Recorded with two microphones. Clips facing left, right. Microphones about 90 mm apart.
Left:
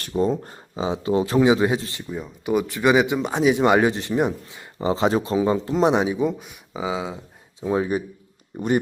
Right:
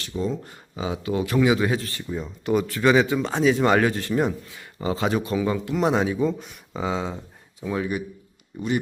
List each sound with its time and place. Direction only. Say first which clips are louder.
0.0 s speech: left 5 dB; 45° left (ahead or behind); by 2.0 s 20° left (ahead or behind)
2.0 s speech: even; 5° left (ahead or behind); by 5.8 s 30° left (ahead or behind)
5.8 s speech: left 2 dB; 20° left (ahead or behind)
6.4 s speech: even; 5° left (ahead or behind)
7.6 s speech: left 4 dB; 30° left (ahead or behind)
8.5 s speech: left 4 dB; 40° left (ahead or behind)